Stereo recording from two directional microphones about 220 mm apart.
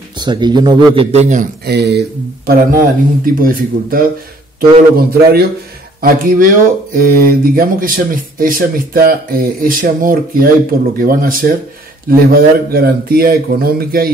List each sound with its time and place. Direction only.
0.2 s speech: 20° right (ahead or behind)
1.7 s a man's voice: 50° right (ahead or behind)